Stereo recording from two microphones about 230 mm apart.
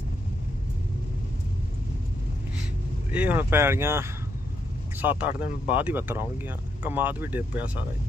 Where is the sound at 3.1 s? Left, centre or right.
Centre.